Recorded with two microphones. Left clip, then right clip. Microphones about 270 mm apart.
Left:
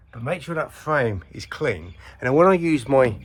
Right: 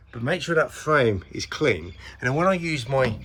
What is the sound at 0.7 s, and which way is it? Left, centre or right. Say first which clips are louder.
Speech: right 2 dB; centre.